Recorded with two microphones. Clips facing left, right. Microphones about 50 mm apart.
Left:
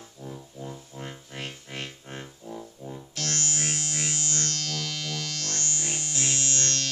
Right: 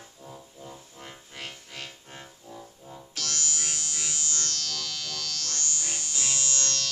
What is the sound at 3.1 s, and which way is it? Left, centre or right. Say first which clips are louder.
Music: left 2 dB; left.